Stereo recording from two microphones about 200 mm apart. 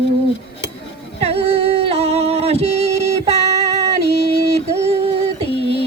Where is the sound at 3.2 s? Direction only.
30° right (ahead or behind).